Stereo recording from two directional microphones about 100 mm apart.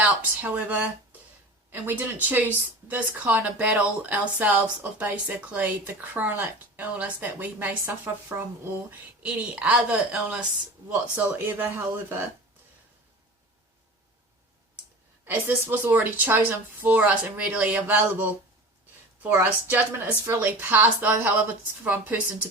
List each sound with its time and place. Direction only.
0.0 s a woman's voice: 15° right (ahead or behind)
9.2 s a woman's voice: 10° right (ahead or behind)
15.2 s a woman's voice: 20° right (ahead or behind)